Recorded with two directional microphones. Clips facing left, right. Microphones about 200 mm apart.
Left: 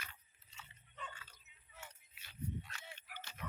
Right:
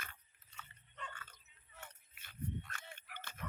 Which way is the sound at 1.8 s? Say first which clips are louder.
Even; 50° right (ahead or behind).